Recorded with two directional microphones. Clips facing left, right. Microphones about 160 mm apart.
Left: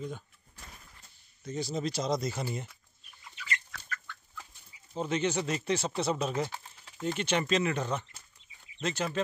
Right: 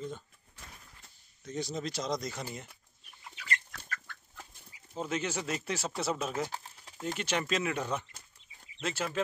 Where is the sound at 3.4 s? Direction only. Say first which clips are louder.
Right 1 dB; 45° right (ahead or behind).